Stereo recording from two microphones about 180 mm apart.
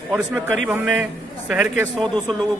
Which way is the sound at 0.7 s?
5° right (ahead or behind).